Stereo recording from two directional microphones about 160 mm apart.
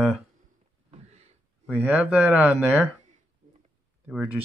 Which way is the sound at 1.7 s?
10° right (ahead or behind).